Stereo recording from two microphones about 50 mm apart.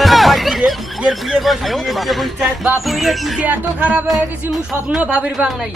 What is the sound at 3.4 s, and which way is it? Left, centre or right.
Speech, right.